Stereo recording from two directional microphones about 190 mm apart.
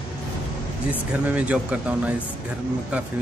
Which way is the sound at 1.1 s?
5° right (ahead or behind).